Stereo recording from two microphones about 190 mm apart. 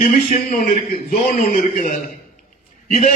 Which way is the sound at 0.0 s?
45° left (ahead or behind).